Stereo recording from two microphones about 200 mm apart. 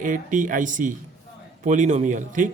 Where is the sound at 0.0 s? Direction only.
40° right (ahead or behind).